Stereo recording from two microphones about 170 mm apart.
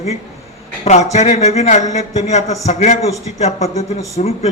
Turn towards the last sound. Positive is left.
turn(degrees=40)  # may be behind; listen again after turning